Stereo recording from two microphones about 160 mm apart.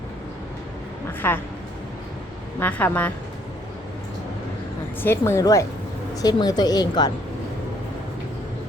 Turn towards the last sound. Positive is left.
turn(degrees=25)  # may be behind; listen again after turning